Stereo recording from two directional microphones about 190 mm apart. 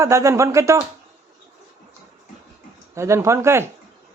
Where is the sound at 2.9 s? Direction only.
15° right (ahead or behind).